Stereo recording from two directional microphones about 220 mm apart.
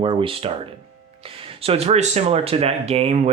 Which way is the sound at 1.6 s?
25° right (ahead or behind).